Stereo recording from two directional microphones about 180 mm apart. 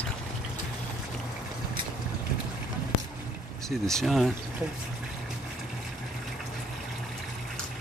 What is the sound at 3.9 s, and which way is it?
Speech, centre (ahead or behind).